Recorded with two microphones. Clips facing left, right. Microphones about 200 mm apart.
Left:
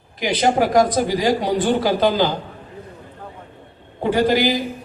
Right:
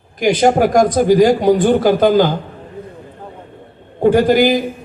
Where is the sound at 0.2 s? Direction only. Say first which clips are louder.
Right 6 dB; 45° right (ahead or behind).